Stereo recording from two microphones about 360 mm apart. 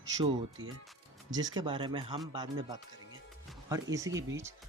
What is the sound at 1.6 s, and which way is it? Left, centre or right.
Speech, centre.